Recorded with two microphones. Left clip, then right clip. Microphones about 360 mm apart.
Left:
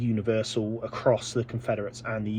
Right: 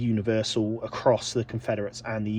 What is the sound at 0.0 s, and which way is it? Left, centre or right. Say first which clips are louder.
Speech: right 1 dB; centre.